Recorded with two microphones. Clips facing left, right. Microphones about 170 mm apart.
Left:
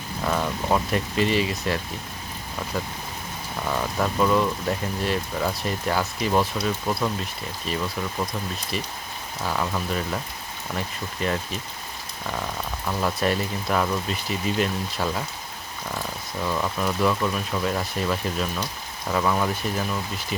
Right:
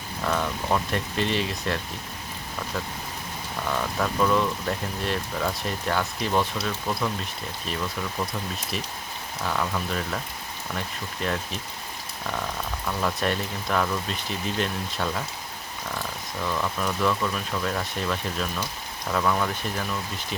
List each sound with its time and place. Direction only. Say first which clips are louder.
0.3 s speech: left 2 dB; 10° left (ahead or behind)
3.7 s speech: left 2 dB; 10° left (ahead or behind)
9.5 s speech: left 1 dB; 5° left (ahead or behind)
12.8 s speech: left 2 dB; 10° left (ahead or behind)